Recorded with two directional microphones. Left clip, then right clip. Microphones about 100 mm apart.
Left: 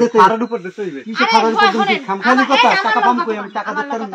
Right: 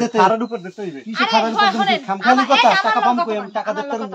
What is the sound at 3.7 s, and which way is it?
Speech, 45° right (ahead or behind).